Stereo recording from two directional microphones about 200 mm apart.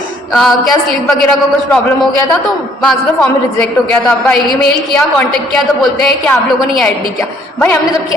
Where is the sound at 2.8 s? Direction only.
5° left (ahead or behind).